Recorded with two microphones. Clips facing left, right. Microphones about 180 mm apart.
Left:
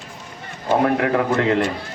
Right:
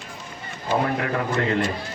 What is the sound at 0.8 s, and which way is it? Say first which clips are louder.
Speech: left 6 dB; 60° left (ahead or behind).